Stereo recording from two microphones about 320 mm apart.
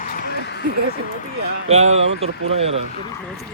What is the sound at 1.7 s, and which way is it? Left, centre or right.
Speech, centre.